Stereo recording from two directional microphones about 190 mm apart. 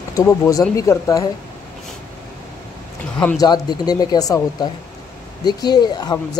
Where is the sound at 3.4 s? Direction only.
20° left (ahead or behind).